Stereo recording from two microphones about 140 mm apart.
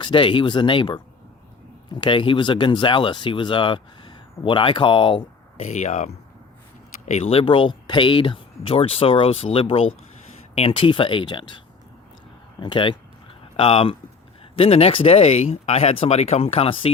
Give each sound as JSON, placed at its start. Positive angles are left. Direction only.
{"t": 0.0, "sound": "speech", "side_deg": 35}
{"t": 5.6, "sound": "speech", "side_deg": 55}
{"t": 12.5, "sound": "speech", "side_deg": 35}